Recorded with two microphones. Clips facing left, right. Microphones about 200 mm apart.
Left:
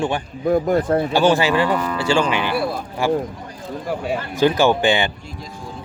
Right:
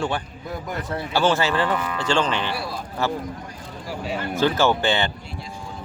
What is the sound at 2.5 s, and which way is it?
Speech, 55° left (ahead or behind).